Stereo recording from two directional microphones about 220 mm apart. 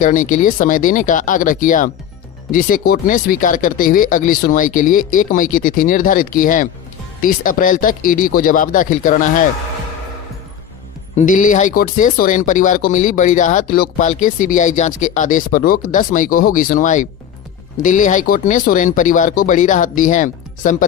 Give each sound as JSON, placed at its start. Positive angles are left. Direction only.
{"t": 0.0, "sound": "speech", "side_deg": 35}
{"t": 11.1, "sound": "speech", "side_deg": 35}